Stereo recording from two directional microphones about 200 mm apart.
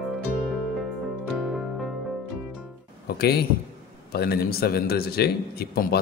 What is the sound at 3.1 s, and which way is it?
A man's voice, 55° left (ahead or behind).